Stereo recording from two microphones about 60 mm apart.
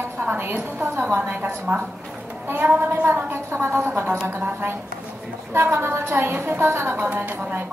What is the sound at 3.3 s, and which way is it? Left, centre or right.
A woman's voice, right.